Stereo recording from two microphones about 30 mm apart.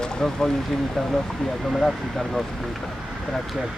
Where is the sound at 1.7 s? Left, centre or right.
Centre.